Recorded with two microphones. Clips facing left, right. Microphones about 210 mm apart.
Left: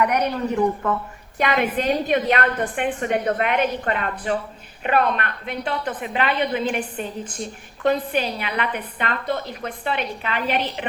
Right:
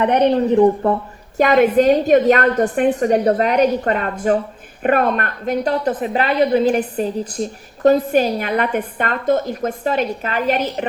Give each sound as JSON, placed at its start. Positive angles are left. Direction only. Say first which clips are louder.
{"t": 0.0, "sound": "a woman's voice", "louder": "right 7 dB", "side_deg": -30}
{"t": 1.4, "sound": "a woman's voice", "louder": "right 9 dB", "side_deg": -45}